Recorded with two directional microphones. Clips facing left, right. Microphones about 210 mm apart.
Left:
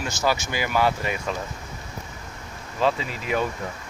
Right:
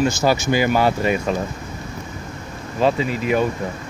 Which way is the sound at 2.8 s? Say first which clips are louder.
Right 5 dB; 15° right (ahead or behind).